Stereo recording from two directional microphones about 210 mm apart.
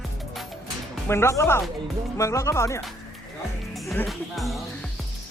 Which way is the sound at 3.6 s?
Centre (ahead or behind).